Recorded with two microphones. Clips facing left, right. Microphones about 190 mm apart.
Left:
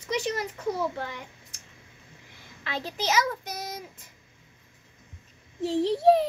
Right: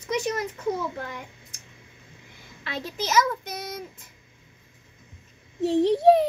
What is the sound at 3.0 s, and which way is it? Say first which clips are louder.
Speech: right 3 dB; 45° right (ahead or behind).